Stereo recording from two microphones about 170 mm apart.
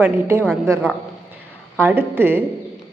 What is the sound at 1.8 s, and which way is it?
Speech, 10° right (ahead or behind).